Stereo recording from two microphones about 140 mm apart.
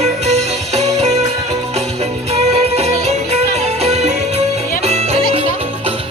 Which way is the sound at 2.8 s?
50° right (ahead or behind).